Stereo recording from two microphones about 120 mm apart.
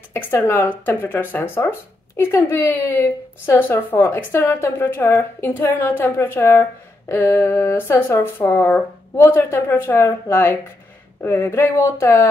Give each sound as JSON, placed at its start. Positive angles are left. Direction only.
{"t": 0.4, "sound": "speech", "side_deg": 15}